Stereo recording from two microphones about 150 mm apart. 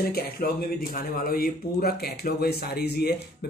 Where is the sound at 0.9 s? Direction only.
75° left (ahead or behind); by 3.1 s 90° left.